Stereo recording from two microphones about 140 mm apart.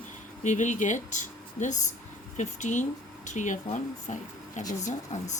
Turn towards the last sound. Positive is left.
turn(degrees=60)  # may be behind; listen again after turning